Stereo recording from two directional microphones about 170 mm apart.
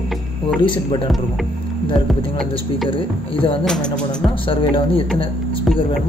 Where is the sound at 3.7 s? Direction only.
5° left (ahead or behind).